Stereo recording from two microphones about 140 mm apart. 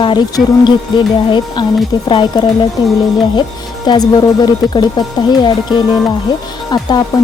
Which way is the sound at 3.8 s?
30° left (ahead or behind).